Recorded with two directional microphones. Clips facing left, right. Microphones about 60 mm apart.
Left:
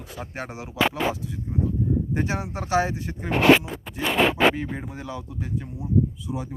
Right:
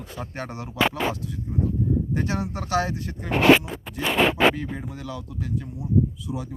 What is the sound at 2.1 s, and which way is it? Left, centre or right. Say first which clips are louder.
Speech: even; centre.